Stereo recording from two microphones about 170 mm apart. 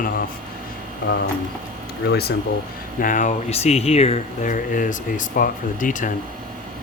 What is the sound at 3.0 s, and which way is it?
Speech, 45° left (ahead or behind).